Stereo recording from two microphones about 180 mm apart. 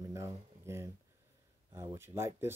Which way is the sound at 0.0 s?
15° right (ahead or behind).